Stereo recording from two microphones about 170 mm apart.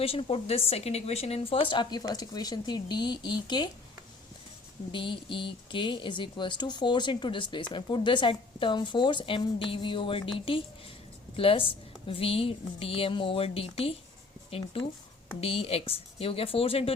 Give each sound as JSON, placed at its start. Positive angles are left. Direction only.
{"t": 0.0, "sound": "speech", "side_deg": 35}
{"t": 4.9, "sound": "a woman's voice", "side_deg": 30}